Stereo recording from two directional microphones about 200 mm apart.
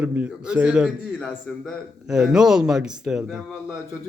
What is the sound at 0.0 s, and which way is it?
Speech, 5° right (ahead or behind).